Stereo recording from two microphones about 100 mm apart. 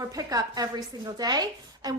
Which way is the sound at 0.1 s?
35° right (ahead or behind).